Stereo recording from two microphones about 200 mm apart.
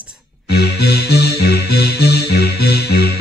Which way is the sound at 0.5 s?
55° left (ahead or behind).